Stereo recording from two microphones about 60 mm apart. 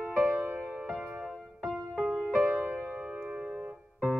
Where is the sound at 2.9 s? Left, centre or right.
Centre.